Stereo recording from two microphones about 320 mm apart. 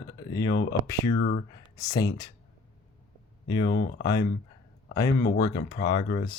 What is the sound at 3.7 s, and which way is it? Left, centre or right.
Speech, left.